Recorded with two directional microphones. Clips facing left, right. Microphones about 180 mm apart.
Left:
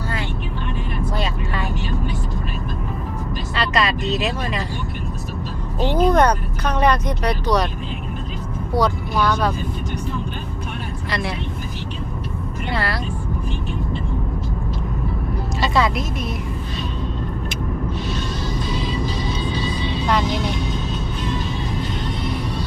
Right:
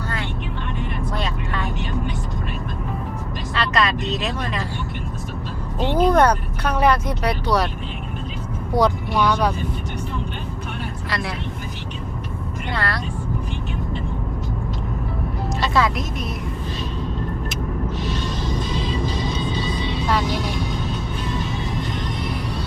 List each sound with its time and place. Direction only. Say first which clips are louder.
1.1 s vehicle: left 1 dB; 5° left (ahead or behind)
3.5 s vehicle: even; centre (ahead or behind)
6.0 s speech: even; 10° right (ahead or behind)
8.7 s speech: right 1 dB; 15° right (ahead or behind)
11.1 s speech: left 3 dB; centre (ahead or behind)
12.7 s speech: left 2 dB; 5° left (ahead or behind)
15.6 s speech: left 1 dB; centre (ahead or behind)
17.5 s vehicle: left 1 dB; centre (ahead or behind)
18.5 s music: left 1 dB; 25° right (ahead or behind)